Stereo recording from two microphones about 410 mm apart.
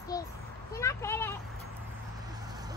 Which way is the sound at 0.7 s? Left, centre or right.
Centre.